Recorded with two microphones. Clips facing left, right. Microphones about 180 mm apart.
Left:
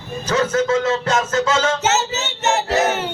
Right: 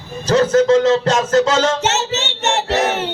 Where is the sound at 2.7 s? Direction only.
Centre (ahead or behind).